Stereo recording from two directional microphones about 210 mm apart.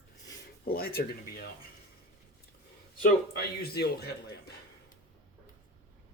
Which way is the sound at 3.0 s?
50° left (ahead or behind).